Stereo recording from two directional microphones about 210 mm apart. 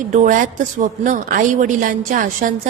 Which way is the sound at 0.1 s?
35° right (ahead or behind).